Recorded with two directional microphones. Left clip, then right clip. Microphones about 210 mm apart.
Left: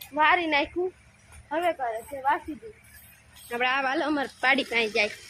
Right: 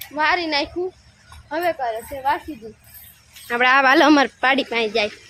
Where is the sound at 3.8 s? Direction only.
50° right (ahead or behind).